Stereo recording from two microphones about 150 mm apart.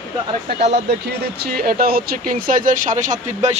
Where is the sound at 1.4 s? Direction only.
85° right.